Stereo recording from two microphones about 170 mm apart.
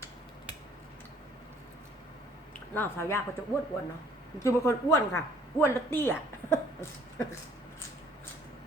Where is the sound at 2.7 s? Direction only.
15° left (ahead or behind).